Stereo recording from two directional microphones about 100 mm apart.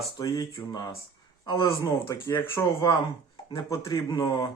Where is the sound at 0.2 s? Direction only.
35° left (ahead or behind).